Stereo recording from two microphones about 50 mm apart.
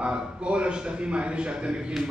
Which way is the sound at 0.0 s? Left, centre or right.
Centre.